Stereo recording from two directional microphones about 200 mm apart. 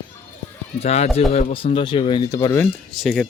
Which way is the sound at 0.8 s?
35° left (ahead or behind).